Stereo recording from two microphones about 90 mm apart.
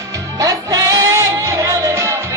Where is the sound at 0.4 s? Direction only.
45° right (ahead or behind).